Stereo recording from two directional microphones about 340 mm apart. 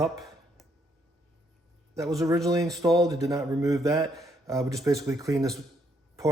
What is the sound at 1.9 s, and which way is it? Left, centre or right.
Speech, centre.